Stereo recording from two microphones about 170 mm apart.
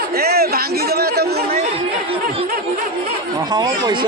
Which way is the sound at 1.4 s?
40° right (ahead or behind).